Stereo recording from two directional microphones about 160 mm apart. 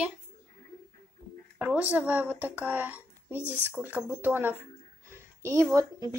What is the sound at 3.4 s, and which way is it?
Speech, 15° left (ahead or behind).